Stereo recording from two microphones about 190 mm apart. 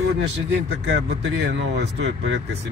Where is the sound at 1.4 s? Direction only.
65° right (ahead or behind).